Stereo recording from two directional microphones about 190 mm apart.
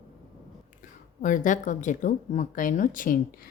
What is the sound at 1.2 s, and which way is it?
Speech, 40° left (ahead or behind).